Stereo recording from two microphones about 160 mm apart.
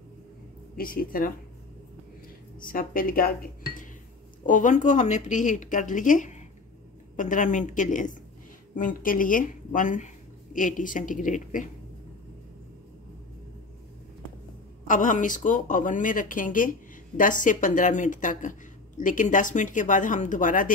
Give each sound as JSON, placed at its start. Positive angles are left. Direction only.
{"t": 0.7, "sound": "speech", "side_deg": 65}
{"t": 2.6, "sound": "a woman's voice", "side_deg": 60}
{"t": 14.9, "sound": "a woman's voice", "side_deg": 55}